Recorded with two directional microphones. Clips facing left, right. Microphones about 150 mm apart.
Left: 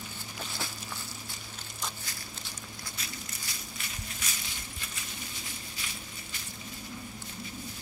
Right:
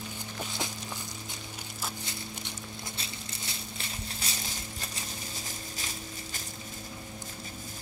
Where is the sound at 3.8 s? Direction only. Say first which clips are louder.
Right 2 dB; 30° right (ahead or behind).